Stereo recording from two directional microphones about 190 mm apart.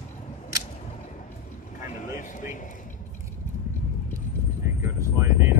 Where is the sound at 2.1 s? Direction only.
45° left (ahead or behind).